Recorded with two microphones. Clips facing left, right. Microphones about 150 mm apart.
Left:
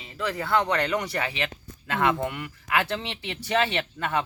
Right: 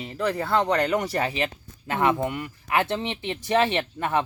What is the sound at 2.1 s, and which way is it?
Speech, 20° right (ahead or behind).